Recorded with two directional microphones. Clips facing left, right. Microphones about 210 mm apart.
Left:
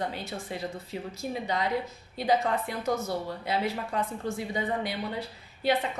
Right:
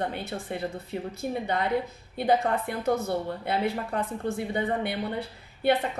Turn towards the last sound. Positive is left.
turn(degrees=-60)  # may be behind; listen again after turning